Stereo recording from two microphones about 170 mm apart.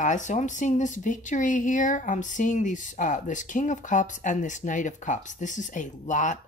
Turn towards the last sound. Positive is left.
turn(degrees=45)  # may be behind; listen again after turning